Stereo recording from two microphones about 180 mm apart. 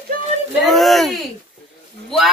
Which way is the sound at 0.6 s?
Centre (ahead or behind).